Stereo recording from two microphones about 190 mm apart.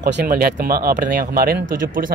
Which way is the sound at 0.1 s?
55° right (ahead or behind).